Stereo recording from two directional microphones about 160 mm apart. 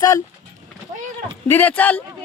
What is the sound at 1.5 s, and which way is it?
Speech, 10° left (ahead or behind).